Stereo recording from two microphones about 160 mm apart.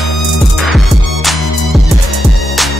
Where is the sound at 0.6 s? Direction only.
Centre (ahead or behind).